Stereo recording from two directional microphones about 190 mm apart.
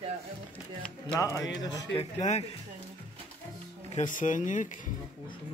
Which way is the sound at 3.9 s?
40° left (ahead or behind).